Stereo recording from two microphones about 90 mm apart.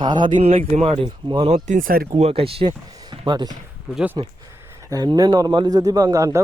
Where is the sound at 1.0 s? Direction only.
65° right (ahead or behind).